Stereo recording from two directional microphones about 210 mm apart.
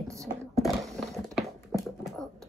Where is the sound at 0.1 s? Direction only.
15° right (ahead or behind).